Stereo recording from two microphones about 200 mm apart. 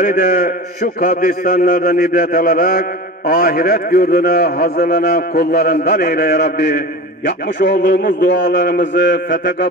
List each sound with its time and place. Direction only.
0.0 s a man's voice: 45° left (ahead or behind)